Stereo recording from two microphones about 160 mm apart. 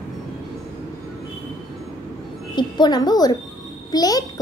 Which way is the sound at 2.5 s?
25° left (ahead or behind).